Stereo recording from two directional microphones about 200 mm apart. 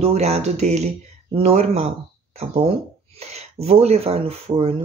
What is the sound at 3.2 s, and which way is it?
Speech, 30° right (ahead or behind).